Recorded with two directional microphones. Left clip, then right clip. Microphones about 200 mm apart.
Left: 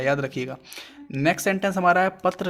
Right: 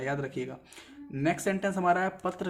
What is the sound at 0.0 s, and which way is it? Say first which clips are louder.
Speech: left 9 dB; 35° left (ahead or behind).